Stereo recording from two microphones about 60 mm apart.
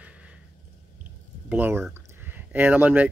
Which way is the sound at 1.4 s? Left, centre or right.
Right.